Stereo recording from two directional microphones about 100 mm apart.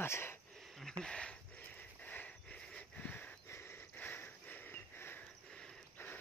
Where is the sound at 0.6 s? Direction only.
Centre (ahead or behind); by 5.2 s 20° left (ahead or behind).